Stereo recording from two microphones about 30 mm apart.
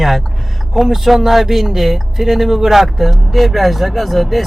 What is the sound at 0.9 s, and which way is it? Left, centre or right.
Speech, centre.